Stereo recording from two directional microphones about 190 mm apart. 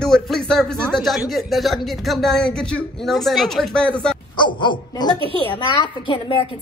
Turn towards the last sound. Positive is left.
turn(degrees=25)  # may be behind; listen again after turning